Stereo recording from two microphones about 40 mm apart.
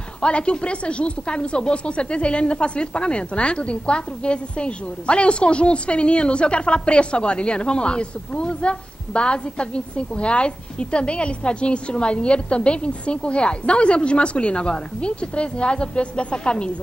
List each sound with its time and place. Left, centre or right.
0.2 s speech: left